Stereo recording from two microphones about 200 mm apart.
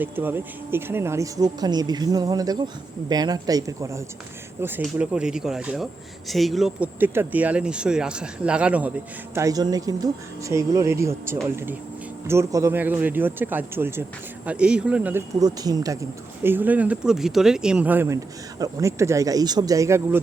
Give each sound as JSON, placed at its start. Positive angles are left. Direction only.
{"t": 0.0, "sound": "speech", "side_deg": -10}
{"t": 4.8, "sound": "speech", "side_deg": -5}
{"t": 9.3, "sound": "speech", "side_deg": -15}